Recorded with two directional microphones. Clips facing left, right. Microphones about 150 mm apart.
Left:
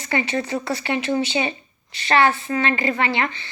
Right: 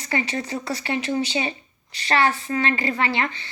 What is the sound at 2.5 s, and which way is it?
Speech, 35° left (ahead or behind).